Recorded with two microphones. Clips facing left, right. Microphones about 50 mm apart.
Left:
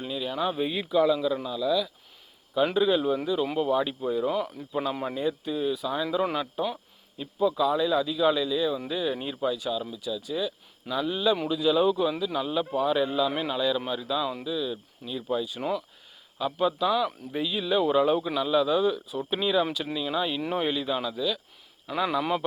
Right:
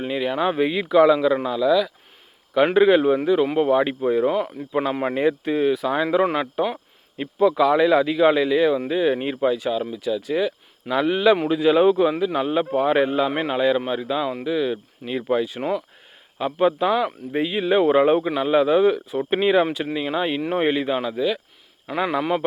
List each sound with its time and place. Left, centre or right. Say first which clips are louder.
0.0 s speech: right 7 dB; right
2.7 s speech: right 10 dB; right
7.2 s speech: right 7 dB; right
9.0 s speech: right 8 dB; right
11.4 s a man's voice: right 7 dB; right
14.4 s speech: right 8 dB; right
16.4 s a man's voice: right 6 dB; right